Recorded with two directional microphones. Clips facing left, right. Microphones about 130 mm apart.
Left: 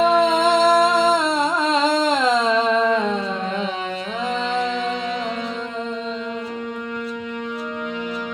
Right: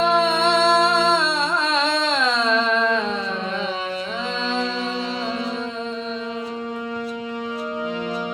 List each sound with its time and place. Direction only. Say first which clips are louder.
0.0 s music: left 2 dB; 45° left (ahead or behind)
2.5 s humming: left 2 dB; 10° left (ahead or behind)